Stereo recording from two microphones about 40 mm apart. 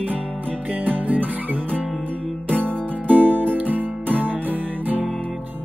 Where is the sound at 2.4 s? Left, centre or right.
Left.